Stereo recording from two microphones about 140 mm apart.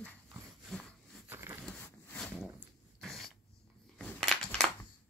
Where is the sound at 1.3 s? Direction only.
15° right (ahead or behind).